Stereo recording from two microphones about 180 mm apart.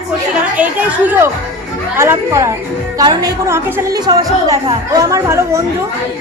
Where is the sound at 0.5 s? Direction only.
10° right (ahead or behind).